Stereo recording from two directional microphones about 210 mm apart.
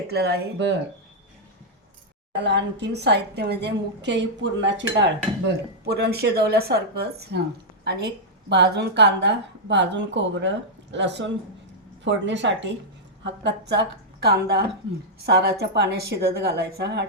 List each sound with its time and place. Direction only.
0.1 s a woman's voice: 50° right (ahead or behind)
2.4 s a woman's voice: 55° right (ahead or behind)